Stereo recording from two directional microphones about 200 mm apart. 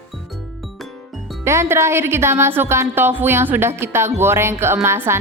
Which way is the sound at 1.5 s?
15° right (ahead or behind).